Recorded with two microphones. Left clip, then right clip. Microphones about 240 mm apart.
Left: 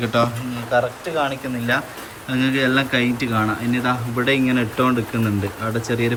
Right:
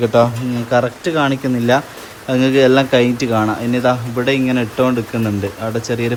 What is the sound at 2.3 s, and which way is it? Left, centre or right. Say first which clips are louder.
Speech: right 7 dB; centre.